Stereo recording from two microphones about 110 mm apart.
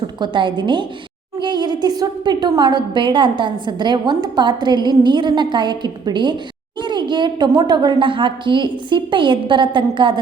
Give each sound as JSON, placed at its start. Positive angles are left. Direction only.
{"t": 0.2, "sound": "a woman's voice", "side_deg": -45}